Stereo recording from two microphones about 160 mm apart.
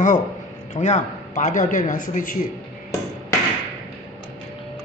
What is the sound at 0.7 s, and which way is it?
A man's voice, 50° left (ahead or behind).